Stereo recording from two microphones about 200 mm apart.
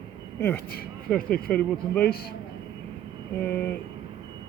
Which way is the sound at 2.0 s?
50° left (ahead or behind).